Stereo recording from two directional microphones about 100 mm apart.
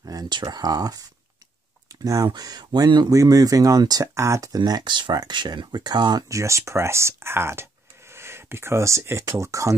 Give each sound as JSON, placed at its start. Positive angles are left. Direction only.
{"t": 0.0, "sound": "speech", "side_deg": -40}
{"t": 2.0, "sound": "speech", "side_deg": -40}
{"t": 4.6, "sound": "speech", "side_deg": -45}
{"t": 6.2, "sound": "speech", "side_deg": -30}